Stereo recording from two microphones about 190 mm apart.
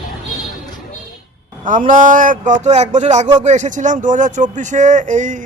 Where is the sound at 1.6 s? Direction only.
45° right (ahead or behind).